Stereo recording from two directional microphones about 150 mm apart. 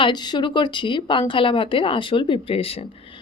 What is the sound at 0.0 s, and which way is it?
A woman's voice, 30° left (ahead or behind).